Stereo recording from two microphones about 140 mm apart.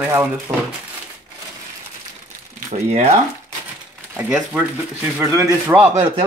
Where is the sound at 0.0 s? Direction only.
10° right (ahead or behind).